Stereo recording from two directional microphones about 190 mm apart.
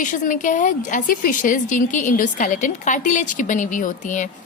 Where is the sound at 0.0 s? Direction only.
40° left (ahead or behind).